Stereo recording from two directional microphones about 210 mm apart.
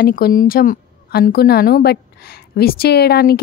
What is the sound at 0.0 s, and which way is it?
A woman's voice, 45° left (ahead or behind).